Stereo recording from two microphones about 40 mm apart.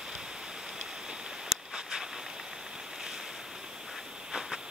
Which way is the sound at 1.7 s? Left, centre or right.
Right.